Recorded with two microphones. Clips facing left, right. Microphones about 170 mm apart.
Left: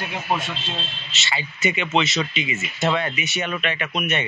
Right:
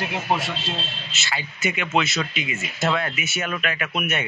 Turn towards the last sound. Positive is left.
turn(degrees=-5)  # may be behind; listen again after turning